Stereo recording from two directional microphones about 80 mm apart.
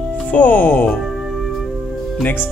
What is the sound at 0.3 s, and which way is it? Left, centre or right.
Speech, centre.